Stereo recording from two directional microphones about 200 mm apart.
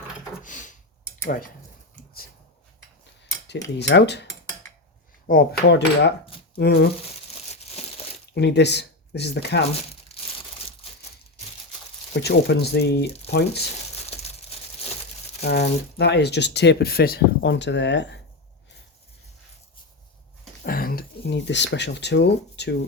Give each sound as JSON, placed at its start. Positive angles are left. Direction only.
{"t": 0.4, "sound": "a sound", "side_deg": 40}
{"t": 3.8, "sound": "speech", "side_deg": 60}
{"t": 5.3, "sound": "cutlery", "side_deg": 50}
{"t": 6.6, "sound": "speech", "side_deg": 55}
{"t": 7.6, "sound": "crushing", "side_deg": 30}
{"t": 8.3, "sound": "speech", "side_deg": 60}
{"t": 12.2, "sound": "speech", "side_deg": 55}
{"t": 14.1, "sound": "crumpling", "side_deg": 30}
{"t": 15.4, "sound": "speech", "side_deg": 55}
{"t": 20.7, "sound": "speech", "side_deg": 45}